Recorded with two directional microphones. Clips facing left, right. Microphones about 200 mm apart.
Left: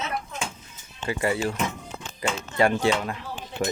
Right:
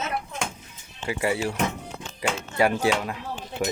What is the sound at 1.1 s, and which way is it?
Speech, 10° right (ahead or behind).